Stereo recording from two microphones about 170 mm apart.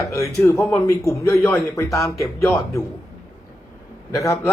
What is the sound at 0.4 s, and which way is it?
Speech, 15° left (ahead or behind).